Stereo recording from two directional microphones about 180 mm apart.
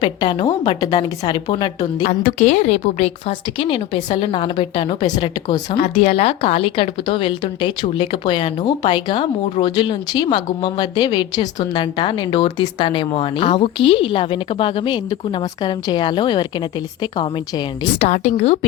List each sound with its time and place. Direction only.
0.0 s speech: 25° left (ahead or behind)
2.0 s speech: 40° left (ahead or behind); by 5.8 s 25° left (ahead or behind)
5.8 s speech: 35° left (ahead or behind)
18.0 s a woman's voice: 40° left (ahead or behind)